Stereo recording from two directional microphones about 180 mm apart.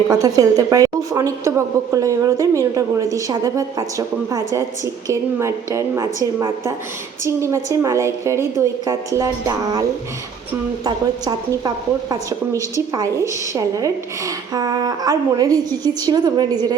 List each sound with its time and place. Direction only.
0.1 s a woman's voice: 20° right (ahead or behind)
10.8 s speech: 20° right (ahead or behind)